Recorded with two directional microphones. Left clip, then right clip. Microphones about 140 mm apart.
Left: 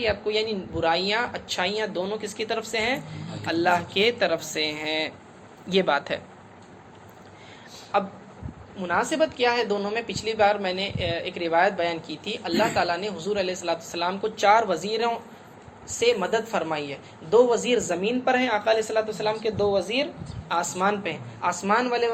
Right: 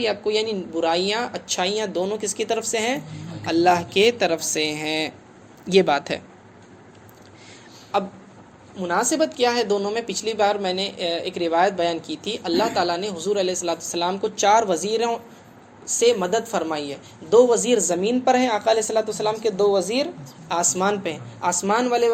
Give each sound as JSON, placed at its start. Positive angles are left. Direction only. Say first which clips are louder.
{"t": 0.0, "sound": "a woman's voice", "louder": "right 3 dB", "side_deg": -45}
{"t": 7.9, "sound": "a woman's voice", "louder": "right 1 dB", "side_deg": -40}
{"t": 20.5, "sound": "a woman's voice", "louder": "right 3 dB", "side_deg": -45}